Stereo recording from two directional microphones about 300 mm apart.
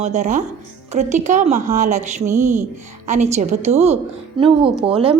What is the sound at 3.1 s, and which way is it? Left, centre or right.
A woman's voice, right.